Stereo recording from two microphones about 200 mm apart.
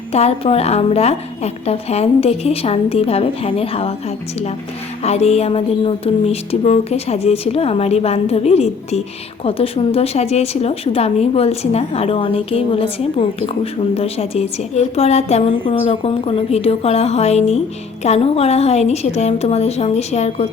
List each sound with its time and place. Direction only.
0.1 s speech: 30° left (ahead or behind)
5.0 s speech: 30° left (ahead or behind)